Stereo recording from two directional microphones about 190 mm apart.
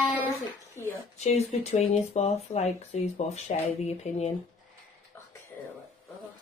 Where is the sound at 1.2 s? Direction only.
35° left (ahead or behind).